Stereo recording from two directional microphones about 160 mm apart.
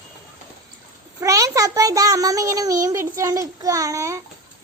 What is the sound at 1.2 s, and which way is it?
A child's voice, 20° right (ahead or behind).